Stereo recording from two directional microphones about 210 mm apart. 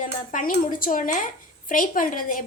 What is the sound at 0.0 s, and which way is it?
A woman's voice, 40° left (ahead or behind).